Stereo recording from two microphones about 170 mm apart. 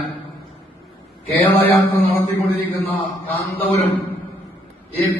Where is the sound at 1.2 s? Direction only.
10° left (ahead or behind).